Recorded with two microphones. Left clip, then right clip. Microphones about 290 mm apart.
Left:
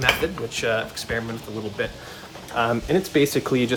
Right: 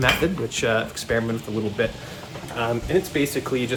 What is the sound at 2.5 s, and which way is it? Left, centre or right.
Speech, left.